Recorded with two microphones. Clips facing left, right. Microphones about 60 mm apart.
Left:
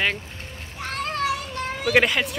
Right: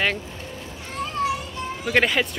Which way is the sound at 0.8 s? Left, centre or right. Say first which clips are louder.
Even; left.